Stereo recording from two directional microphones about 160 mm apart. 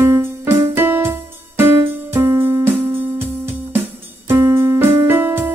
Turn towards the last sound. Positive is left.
turn(degrees=-15)  # may be behind; listen again after turning